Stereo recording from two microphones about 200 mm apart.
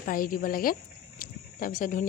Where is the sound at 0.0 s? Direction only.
45° left (ahead or behind).